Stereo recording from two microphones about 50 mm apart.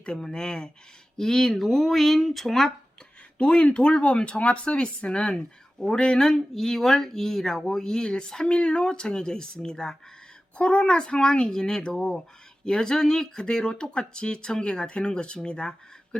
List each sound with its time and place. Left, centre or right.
0.0 s speech: centre
3.3 s speech: left